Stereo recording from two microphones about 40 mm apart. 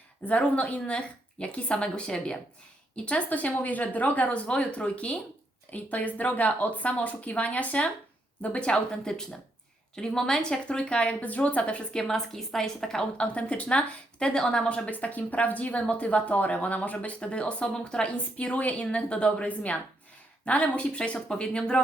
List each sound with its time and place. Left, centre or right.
0.3 s a woman's voice: left
3.2 s speech: left
4.4 s speech: left
8.7 s a woman's voice: centre; by 11.8 s left
11.9 s a woman's voice: centre
13.1 s speech: left
14.2 s a woman's voice: centre
14.7 s speech: left
17.2 s a woman's voice: left
18.3 s speech: left
19.5 s a woman's voice: left